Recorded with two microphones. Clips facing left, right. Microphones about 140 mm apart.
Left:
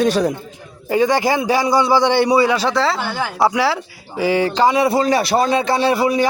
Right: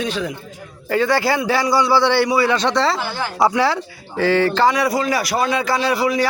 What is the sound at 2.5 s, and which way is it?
A man's voice, 5° left (ahead or behind).